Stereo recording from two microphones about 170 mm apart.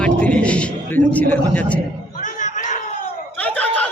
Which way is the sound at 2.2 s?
50° left (ahead or behind).